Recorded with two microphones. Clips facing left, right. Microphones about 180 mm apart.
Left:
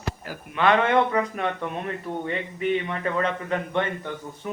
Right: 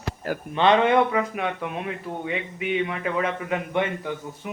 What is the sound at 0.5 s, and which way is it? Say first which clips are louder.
Speech: right 2 dB; 20° right (ahead or behind).